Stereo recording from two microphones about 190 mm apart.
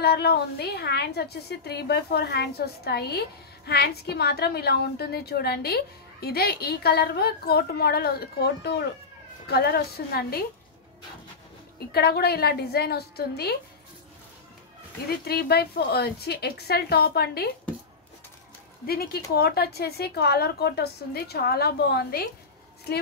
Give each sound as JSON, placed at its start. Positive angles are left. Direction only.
{"t": 0.0, "sound": "a woman's voice", "side_deg": 55}
{"t": 11.9, "sound": "a woman's voice", "side_deg": 55}
{"t": 15.0, "sound": "a woman's voice", "side_deg": 55}
{"t": 18.9, "sound": "a woman's voice", "side_deg": 55}